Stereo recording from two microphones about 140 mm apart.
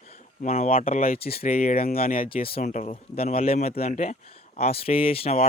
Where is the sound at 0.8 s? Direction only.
85° left.